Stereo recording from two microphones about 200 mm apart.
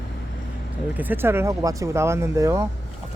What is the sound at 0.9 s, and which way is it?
Speech, 10° right (ahead or behind).